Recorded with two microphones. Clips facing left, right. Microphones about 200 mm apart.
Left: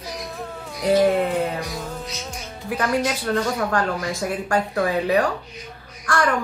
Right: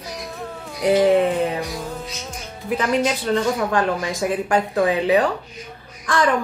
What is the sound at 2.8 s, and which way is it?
Speech, 20° right (ahead or behind).